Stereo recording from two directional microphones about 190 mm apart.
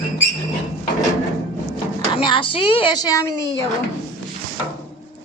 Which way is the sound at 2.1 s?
25° left (ahead or behind).